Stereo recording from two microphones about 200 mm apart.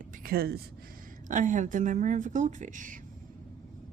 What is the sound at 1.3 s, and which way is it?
Speech, 40° right (ahead or behind).